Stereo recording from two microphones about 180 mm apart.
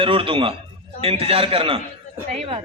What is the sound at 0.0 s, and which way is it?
A man's voice, 30° right (ahead or behind).